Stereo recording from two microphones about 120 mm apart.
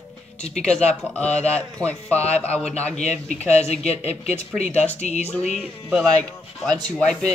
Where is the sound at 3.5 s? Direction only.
65° left (ahead or behind).